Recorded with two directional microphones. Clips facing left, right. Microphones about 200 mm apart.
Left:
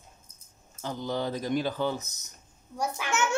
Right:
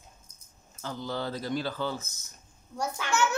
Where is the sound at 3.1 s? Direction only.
20° left (ahead or behind).